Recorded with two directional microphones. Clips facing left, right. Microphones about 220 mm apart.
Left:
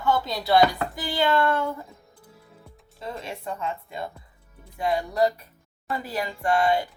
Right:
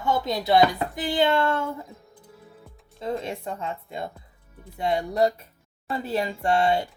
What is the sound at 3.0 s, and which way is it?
A woman's voice, 20° right (ahead or behind).